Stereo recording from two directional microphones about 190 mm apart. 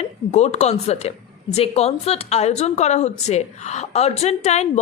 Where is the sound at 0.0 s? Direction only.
35° left (ahead or behind).